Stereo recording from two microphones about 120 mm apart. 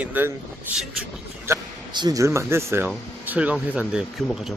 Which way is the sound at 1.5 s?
20° right (ahead or behind).